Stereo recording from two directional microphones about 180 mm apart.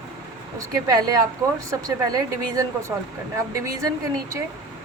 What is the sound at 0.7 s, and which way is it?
A woman's voice, 20° right (ahead or behind).